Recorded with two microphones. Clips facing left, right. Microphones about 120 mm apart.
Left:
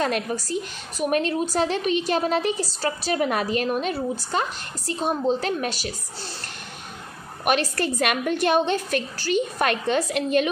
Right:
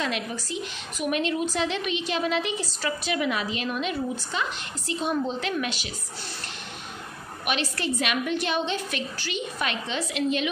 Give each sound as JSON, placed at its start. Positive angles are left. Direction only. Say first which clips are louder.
{"t": 0.0, "sound": "a woman's voice", "louder": "left 5 dB", "side_deg": 45}
{"t": 7.4, "sound": "a woman's voice", "louder": "left 5 dB", "side_deg": 45}